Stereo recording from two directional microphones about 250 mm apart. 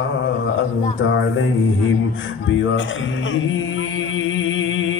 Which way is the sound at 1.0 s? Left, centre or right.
Left.